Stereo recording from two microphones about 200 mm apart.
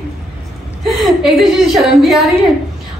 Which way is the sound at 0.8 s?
Centre (ahead or behind).